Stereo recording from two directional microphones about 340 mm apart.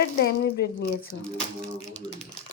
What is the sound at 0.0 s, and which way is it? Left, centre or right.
Speech, left.